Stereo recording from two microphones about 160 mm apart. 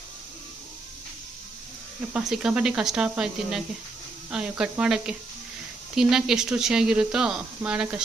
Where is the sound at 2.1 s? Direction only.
5° right (ahead or behind).